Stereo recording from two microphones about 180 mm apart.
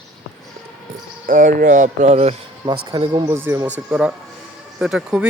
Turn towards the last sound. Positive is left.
turn(degrees=-5)  # may be behind; listen again after turning